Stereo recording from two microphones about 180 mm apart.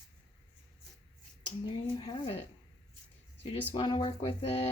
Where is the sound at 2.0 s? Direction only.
25° left (ahead or behind).